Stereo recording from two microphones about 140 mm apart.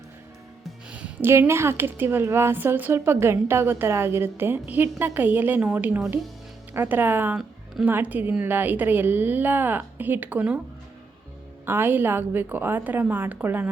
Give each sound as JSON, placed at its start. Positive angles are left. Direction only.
{"t": 0.9, "sound": "a woman's voice", "side_deg": -10}
{"t": 11.6, "sound": "a woman's voice", "side_deg": -15}